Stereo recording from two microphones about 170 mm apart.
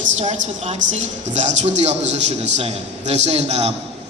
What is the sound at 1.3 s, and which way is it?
A woman's voice, 45° right (ahead or behind).